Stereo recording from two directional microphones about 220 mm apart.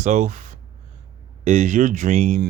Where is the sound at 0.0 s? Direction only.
35° right (ahead or behind).